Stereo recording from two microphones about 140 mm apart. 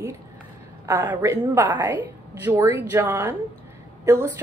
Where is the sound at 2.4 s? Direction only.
15° right (ahead or behind).